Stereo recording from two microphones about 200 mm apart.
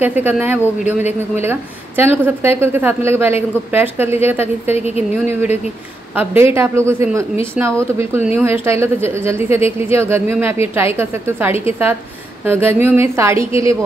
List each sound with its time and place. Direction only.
0.0 s a woman's voice: 10° right (ahead or behind)
4.7 s speech: 30° left (ahead or behind)
5.1 s a woman's voice: 10° right (ahead or behind)